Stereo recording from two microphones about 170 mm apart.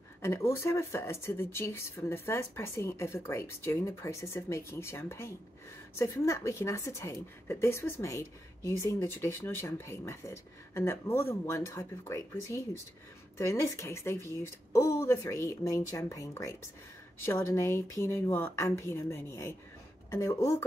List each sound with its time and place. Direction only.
0.2 s a woman's voice: 15° left (ahead or behind)